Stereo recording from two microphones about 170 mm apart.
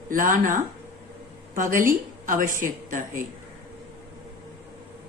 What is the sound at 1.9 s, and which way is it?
A woman's voice, 50° right (ahead or behind).